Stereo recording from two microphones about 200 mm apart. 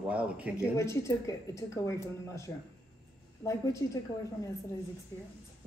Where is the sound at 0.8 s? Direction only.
15° left (ahead or behind).